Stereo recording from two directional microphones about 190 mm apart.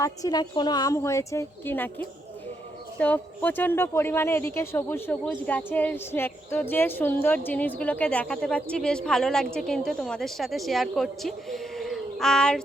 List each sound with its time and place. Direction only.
0.0 s a woman's voice: 20° left (ahead or behind); by 12.6 s 5° left (ahead or behind)